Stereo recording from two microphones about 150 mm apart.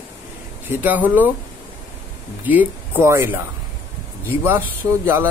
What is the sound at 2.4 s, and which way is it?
Speech, 10° right (ahead or behind).